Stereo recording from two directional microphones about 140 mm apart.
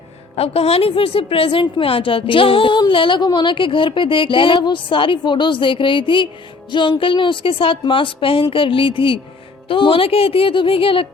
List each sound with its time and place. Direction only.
0.3 s a woman's voice: 45° left (ahead or behind)